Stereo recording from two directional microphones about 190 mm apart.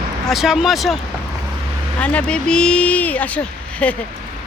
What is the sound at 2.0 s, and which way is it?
Speech, 5° left (ahead or behind).